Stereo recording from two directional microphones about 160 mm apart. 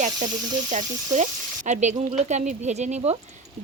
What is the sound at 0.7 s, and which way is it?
Speech, 50° right (ahead or behind).